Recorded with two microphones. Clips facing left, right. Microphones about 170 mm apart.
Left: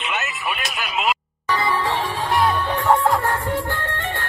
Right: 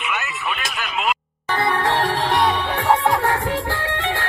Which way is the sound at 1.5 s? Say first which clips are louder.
Right 1 dB; 60° right (ahead or behind).